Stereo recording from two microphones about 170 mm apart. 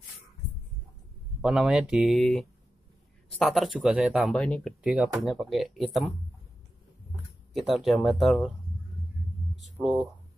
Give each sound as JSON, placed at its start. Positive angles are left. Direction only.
{"t": 1.4, "sound": "speech", "side_deg": -5}
{"t": 4.8, "sound": "speech", "side_deg": -5}
{"t": 7.5, "sound": "speech", "side_deg": 0}
{"t": 9.6, "sound": "a sound", "side_deg": 0}